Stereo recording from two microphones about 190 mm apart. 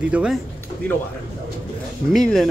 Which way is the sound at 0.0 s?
5° right (ahead or behind).